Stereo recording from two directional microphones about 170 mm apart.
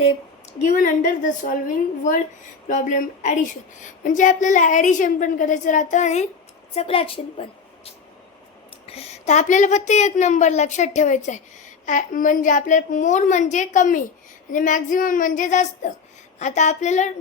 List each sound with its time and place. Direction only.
0.6 s a woman's voice: 50° left (ahead or behind); by 7.4 s 35° left (ahead or behind)
8.9 s a woman's voice: 40° left (ahead or behind)